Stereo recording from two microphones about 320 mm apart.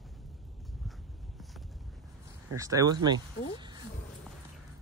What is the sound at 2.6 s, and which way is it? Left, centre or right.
Speech, centre.